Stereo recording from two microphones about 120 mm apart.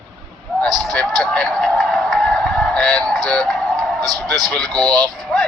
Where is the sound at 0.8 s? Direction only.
Centre (ahead or behind).